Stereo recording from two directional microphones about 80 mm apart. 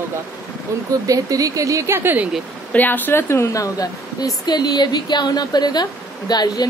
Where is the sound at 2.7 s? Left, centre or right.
Left.